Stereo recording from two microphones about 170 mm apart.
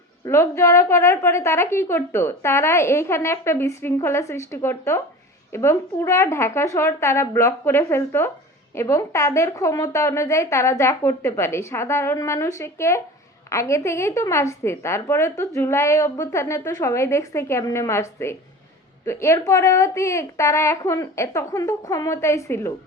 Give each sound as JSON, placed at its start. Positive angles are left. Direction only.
{"t": 0.3, "sound": "a woman's voice", "side_deg": 15}